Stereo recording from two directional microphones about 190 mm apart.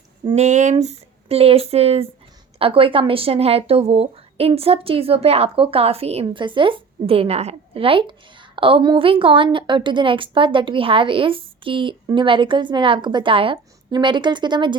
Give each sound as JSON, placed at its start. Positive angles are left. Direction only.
{"t": 0.3, "sound": "speech", "side_deg": -35}